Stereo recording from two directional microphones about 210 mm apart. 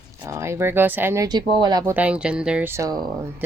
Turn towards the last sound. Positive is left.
turn(degrees=-20)  # may be behind; listen again after turning